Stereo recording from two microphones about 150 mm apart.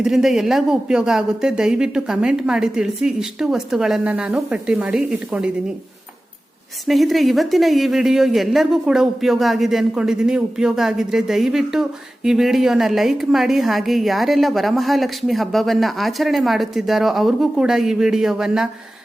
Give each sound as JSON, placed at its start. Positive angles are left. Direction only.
{"t": 0.0, "sound": "a woman's voice", "side_deg": 0}
{"t": 6.8, "sound": "a woman's voice", "side_deg": 0}